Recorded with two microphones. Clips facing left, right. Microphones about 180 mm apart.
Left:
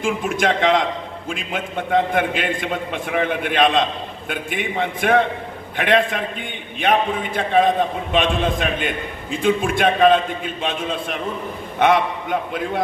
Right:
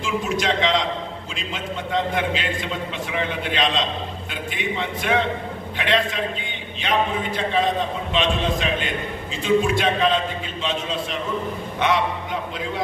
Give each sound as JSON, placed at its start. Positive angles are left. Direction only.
{"t": 0.0, "sound": "a man's voice", "side_deg": 50}